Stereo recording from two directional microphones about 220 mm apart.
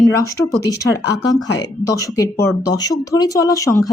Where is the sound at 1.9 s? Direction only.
15° left (ahead or behind).